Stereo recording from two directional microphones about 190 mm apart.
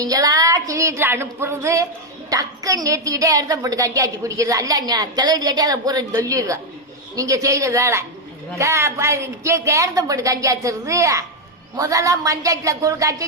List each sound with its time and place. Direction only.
0.0 s a woman's voice: 20° right (ahead or behind)